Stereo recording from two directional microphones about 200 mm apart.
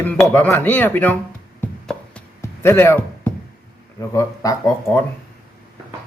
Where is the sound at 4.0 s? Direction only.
15° left (ahead or behind).